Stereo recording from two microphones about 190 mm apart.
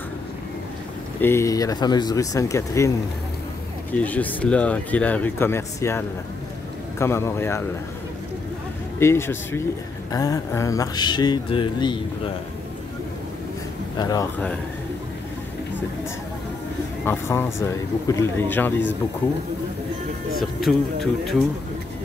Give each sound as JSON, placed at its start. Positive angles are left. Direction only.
{"t": 1.2, "sound": "speech", "side_deg": 15}
{"t": 3.9, "sound": "speech", "side_deg": 10}
{"t": 9.0, "sound": "speech", "side_deg": 15}
{"t": 13.9, "sound": "speech", "side_deg": 20}
{"t": 17.0, "sound": "speech", "side_deg": 10}
{"t": 20.3, "sound": "speech", "side_deg": 0}